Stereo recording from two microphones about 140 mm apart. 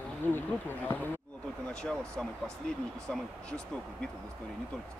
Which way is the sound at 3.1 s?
5° left (ahead or behind).